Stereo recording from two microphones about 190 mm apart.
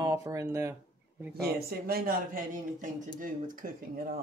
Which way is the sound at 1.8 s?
50° right (ahead or behind).